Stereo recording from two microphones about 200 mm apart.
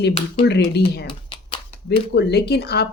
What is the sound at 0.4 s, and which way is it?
Speech, 55° left (ahead or behind).